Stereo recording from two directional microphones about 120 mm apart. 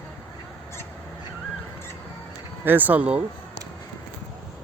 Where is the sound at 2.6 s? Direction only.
15° right (ahead or behind).